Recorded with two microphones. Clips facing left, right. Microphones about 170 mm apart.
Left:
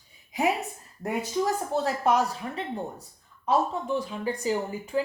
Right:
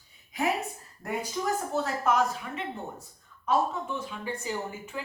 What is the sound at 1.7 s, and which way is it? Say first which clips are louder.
Speech: left 3 dB; 35° left (ahead or behind).